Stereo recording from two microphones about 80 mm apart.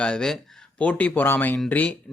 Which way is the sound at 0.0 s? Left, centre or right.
Centre.